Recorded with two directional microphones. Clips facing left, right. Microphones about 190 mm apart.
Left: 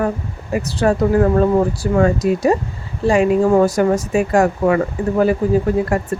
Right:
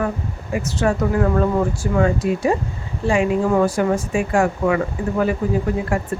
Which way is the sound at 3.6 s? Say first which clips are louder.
Left 3 dB; 40° left (ahead or behind).